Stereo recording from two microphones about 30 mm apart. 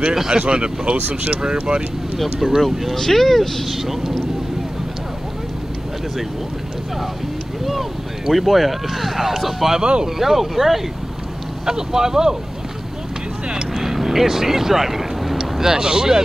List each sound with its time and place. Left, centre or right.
0.0 s speech: centre
0.3 s speech: right
0.9 s speech: right
1.3 s speech: right
2.4 s speech: centre
3.6 s speech: centre
8.3 s speech: centre
11.6 s speech: centre
13.7 s vehicle: centre
15.6 s speech: right